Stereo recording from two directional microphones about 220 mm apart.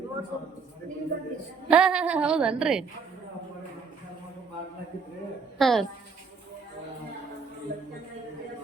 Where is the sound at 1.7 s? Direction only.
5° right (ahead or behind).